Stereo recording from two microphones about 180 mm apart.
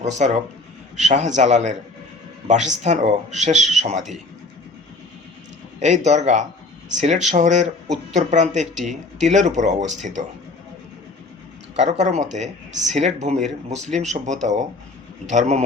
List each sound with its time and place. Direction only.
0.0 s speech: 40° right (ahead or behind)
2.8 s speech: 40° right (ahead or behind)
5.8 s speech: 40° right (ahead or behind)
11.8 s speech: 40° right (ahead or behind)